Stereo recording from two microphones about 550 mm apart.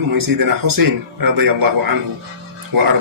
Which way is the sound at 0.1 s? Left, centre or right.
Right.